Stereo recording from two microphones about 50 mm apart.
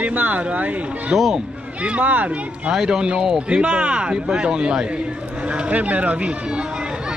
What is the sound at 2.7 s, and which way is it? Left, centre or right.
A man's voice, centre.